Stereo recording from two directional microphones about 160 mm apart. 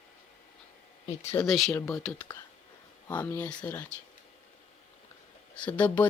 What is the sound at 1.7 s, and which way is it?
Speech, 20° left (ahead or behind).